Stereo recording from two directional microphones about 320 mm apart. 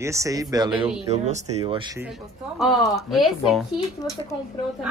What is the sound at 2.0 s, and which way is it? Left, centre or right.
A woman's voice, centre.